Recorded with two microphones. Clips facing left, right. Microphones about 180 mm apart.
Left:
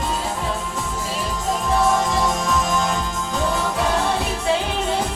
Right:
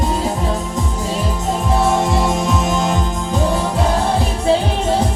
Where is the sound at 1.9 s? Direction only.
30° right (ahead or behind).